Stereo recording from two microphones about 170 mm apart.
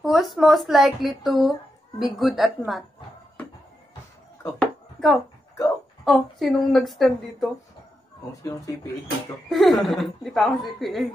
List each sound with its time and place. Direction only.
0.0 s a woman's voice: centre (ahead or behind)
4.6 s a sound: centre (ahead or behind)
6.0 s a woman's voice: centre (ahead or behind)
8.5 s speech: 20° left (ahead or behind)
9.5 s a woman's voice: centre (ahead or behind)